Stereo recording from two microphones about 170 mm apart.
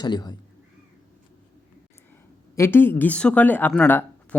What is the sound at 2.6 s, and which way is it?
Speech, 15° left (ahead or behind).